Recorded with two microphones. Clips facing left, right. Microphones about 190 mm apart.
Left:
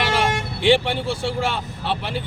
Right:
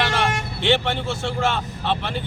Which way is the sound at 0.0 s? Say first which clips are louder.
Left 1 dB; 10° left (ahead or behind).